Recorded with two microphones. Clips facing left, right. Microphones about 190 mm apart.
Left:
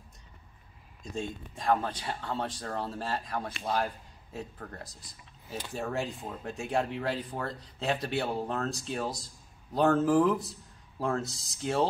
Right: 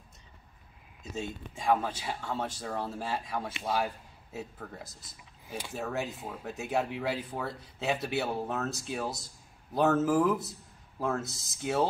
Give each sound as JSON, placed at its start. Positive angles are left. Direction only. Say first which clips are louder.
{"t": 1.0, "sound": "speech", "louder": "left 1 dB", "side_deg": -5}